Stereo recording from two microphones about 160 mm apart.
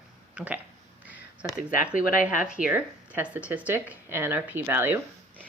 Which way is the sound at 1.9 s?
60° left (ahead or behind).